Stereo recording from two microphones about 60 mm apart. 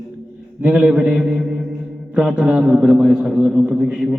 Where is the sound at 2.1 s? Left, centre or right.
Centre.